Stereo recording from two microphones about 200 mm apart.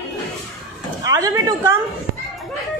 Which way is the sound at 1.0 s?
15° right (ahead or behind).